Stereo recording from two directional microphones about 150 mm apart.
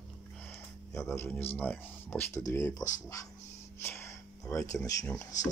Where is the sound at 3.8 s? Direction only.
15° left (ahead or behind).